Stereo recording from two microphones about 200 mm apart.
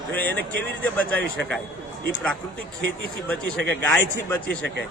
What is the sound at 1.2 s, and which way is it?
Speech, 65° right (ahead or behind).